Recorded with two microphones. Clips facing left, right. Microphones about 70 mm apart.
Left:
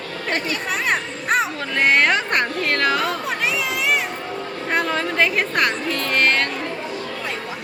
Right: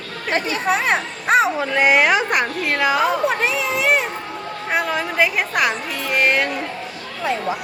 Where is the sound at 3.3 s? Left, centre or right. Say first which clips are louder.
Right 3 dB; right.